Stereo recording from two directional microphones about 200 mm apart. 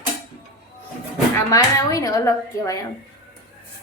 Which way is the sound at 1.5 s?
15° left (ahead or behind).